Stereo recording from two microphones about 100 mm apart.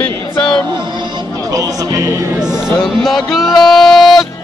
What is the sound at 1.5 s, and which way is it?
Speech, 35° right (ahead or behind).